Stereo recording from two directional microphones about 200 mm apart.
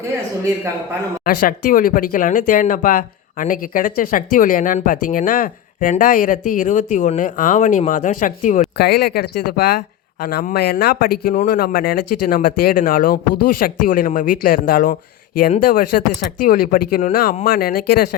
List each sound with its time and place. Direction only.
1.2 s speech: 45° left (ahead or behind)
8.8 s speech: 50° left (ahead or behind)